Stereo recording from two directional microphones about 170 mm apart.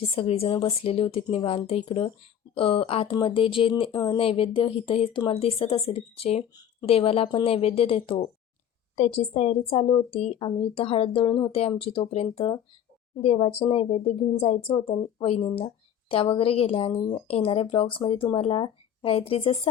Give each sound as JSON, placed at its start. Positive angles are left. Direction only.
{"t": 0.2, "sound": "speech", "side_deg": 35}